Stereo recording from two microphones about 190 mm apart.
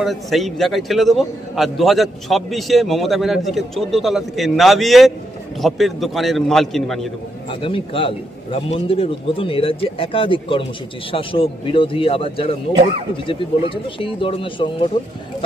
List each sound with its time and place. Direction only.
0.0 s a man's voice: centre (ahead or behind)
7.6 s a man's voice: 30° left (ahead or behind)